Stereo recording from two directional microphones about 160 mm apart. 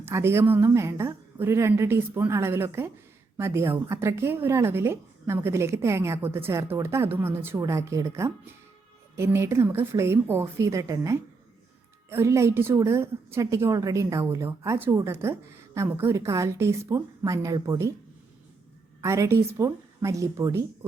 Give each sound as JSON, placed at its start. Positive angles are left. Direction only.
{"t": 0.0, "sound": "a woman's voice", "side_deg": -15}
{"t": 19.0, "sound": "a woman's voice", "side_deg": -15}